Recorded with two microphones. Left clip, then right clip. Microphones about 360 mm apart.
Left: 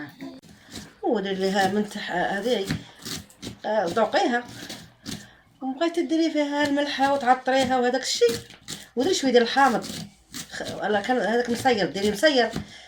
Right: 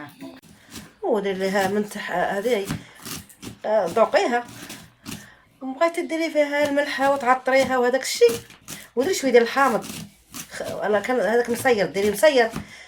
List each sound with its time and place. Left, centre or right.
1.1 s speech: right
2.6 s speech: centre
3.6 s speech: centre
5.8 s speech: right
8.7 s a sound: centre
9.0 s speech: right